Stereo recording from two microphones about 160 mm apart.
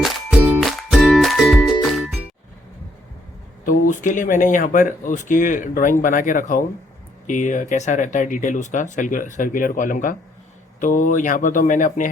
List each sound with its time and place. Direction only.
0.0 s music: 5° right (ahead or behind)
3.8 s speech: 50° left (ahead or behind)